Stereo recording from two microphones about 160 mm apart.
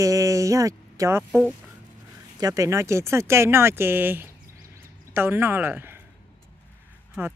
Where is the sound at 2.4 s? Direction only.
20° right (ahead or behind).